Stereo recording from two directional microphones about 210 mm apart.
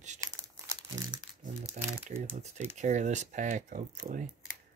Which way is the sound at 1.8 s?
30° right (ahead or behind).